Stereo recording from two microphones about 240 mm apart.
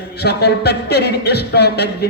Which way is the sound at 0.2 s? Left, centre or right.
Left.